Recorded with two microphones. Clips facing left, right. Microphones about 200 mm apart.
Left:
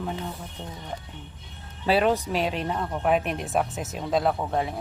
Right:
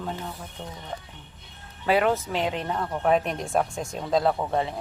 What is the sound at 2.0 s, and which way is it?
Speech, 15° left (ahead or behind).